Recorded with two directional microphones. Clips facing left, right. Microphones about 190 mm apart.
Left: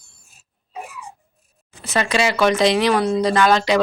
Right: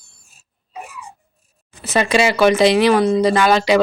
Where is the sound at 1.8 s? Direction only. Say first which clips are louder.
Right 4 dB; 10° right (ahead or behind).